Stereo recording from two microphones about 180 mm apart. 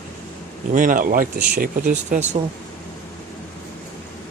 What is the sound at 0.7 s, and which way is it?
Speech, 50° right (ahead or behind).